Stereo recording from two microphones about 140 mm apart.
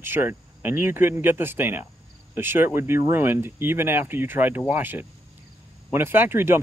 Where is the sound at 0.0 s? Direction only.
15° right (ahead or behind).